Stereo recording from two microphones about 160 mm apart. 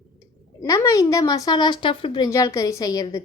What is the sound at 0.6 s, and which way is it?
A woman's voice, 20° left (ahead or behind).